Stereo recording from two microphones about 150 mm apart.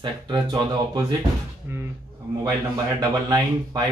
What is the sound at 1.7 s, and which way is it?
Speech, 15° right (ahead or behind).